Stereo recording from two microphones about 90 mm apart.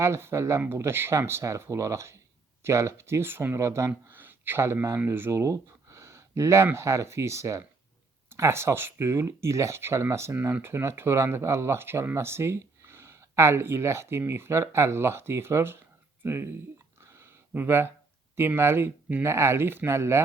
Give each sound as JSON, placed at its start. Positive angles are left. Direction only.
{"t": 0.0, "sound": "speech", "side_deg": -30}
{"t": 17.0, "sound": "a sound", "side_deg": -30}
{"t": 18.3, "sound": "speech", "side_deg": -25}